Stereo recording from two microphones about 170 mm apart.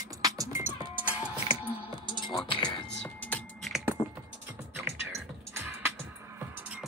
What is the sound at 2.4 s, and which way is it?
Music, 30° left (ahead or behind).